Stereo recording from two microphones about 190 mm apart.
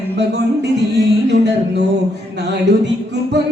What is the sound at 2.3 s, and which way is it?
Speech, 65° right (ahead or behind).